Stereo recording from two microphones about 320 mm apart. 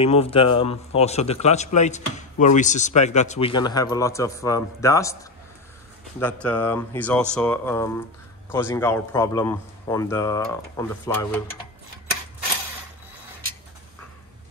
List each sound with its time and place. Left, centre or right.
0.0 s a man's voice: centre
6.1 s a man's voice: centre